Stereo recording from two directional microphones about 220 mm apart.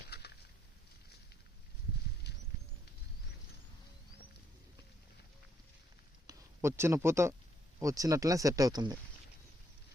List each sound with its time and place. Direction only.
0.1 s a sound: 50° left (ahead or behind)
2.3 s rodents: 50° left (ahead or behind)
6.2 s speech: 10° right (ahead or behind)